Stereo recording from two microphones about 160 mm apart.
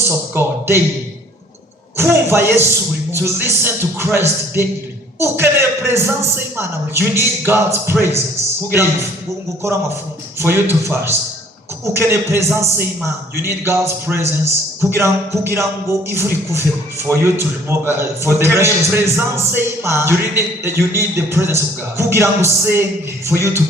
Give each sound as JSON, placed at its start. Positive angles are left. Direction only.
{"t": 0.1, "sound": "a man's voice", "side_deg": -15}
{"t": 2.0, "sound": "a man's voice", "side_deg": -15}
{"t": 10.4, "sound": "a man's voice", "side_deg": -15}